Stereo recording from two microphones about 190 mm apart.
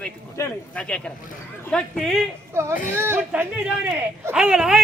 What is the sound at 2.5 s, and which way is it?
Speech, 15° right (ahead or behind).